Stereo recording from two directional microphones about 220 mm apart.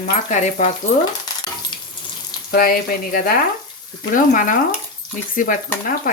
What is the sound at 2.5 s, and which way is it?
Speech, 40° left (ahead or behind).